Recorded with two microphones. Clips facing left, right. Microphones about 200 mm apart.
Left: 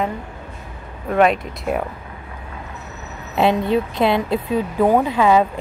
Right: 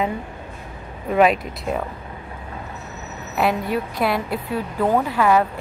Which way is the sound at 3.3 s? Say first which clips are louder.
Left 4 dB; 25° left (ahead or behind).